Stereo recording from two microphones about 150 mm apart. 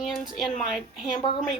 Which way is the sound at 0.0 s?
Centre (ahead or behind).